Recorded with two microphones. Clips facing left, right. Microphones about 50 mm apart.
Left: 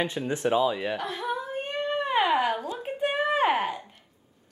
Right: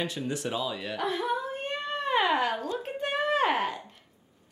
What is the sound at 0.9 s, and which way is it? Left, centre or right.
Speech, centre.